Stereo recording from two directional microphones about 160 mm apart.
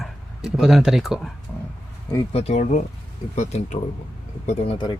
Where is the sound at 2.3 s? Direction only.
45° left (ahead or behind).